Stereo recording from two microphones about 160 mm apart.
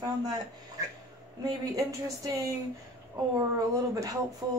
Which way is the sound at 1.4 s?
20° right (ahead or behind).